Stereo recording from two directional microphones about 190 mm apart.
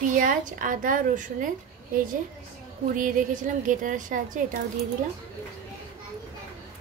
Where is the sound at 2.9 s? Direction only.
45° right (ahead or behind).